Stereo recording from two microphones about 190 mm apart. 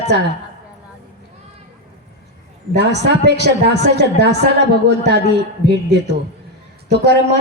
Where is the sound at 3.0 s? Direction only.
65° right (ahead or behind).